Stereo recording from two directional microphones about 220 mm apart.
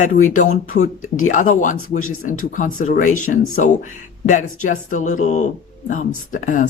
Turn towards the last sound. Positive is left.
turn(degrees=35)  # may be behind; listen again after turning